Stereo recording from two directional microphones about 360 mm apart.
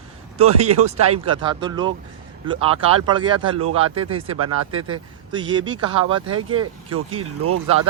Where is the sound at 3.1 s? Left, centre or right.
Centre.